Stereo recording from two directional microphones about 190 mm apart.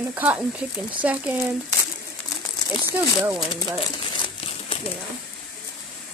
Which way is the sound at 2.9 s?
15° right (ahead or behind).